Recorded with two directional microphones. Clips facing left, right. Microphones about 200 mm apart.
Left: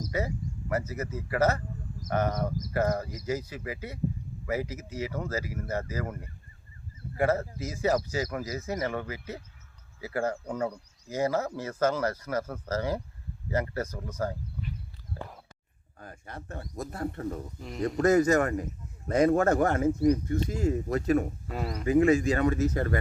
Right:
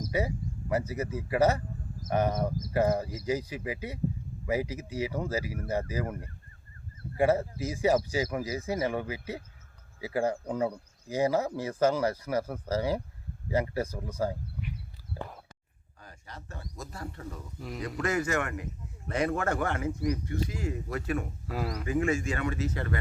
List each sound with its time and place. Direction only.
0.0 s speech: 15° right (ahead or behind)
7.2 s speech: 15° right (ahead or behind)
16.0 s speech: 50° left (ahead or behind)
17.6 s speech: centre (ahead or behind)
17.8 s a man's voice: 45° left (ahead or behind)
21.4 s speech: centre (ahead or behind)
21.8 s a man's voice: 35° left (ahead or behind)